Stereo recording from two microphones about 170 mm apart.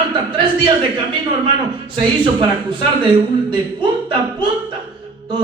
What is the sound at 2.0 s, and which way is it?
A man's voice, 30° right (ahead or behind).